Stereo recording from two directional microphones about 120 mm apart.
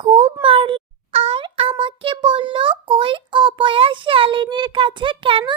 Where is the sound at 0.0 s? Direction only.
50° right (ahead or behind).